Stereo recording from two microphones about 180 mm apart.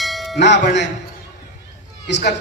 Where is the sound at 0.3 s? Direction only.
75° left (ahead or behind).